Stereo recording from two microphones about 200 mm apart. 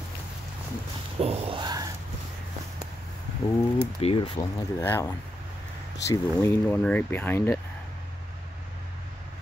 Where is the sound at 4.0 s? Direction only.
25° left (ahead or behind).